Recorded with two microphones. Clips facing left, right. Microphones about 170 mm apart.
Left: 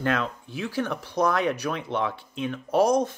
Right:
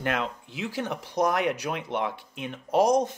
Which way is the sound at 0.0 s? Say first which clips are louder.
Left 2 dB; 15° right (ahead or behind).